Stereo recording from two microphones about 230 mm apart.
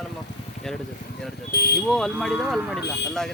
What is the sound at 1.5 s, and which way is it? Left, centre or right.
Speech, left.